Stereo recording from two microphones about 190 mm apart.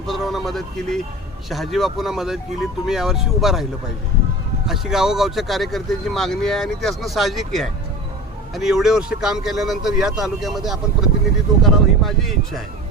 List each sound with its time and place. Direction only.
0.1 s speech: centre (ahead or behind)